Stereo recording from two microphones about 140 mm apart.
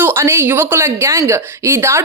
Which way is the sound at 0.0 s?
15° right (ahead or behind).